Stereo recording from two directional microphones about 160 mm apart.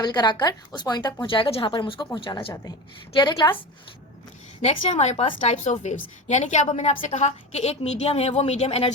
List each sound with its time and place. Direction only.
0.0 s a woman's voice: 25° left (ahead or behind)
4.6 s a woman's voice: 45° left (ahead or behind)